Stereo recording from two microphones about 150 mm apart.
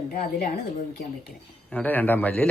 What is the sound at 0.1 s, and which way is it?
Speech, 90° left.